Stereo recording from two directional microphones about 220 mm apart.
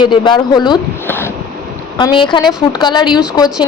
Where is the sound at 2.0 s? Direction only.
20° left (ahead or behind).